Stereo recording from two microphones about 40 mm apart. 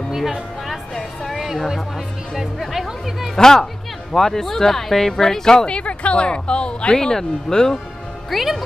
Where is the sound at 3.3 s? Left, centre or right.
Centre.